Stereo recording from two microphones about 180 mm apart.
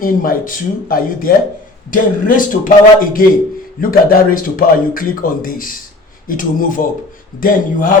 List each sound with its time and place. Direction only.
0.0 s speech: 50° left (ahead or behind)